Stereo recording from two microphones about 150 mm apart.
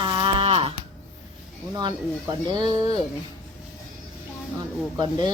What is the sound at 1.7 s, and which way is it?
A woman's voice, 30° right (ahead or behind).